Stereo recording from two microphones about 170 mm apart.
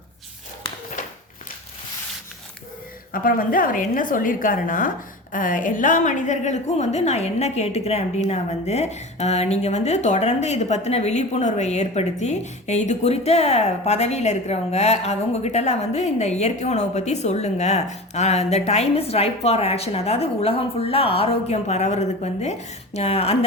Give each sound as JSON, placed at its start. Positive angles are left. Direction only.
{"t": 3.1, "sound": "a woman's voice", "side_deg": 55}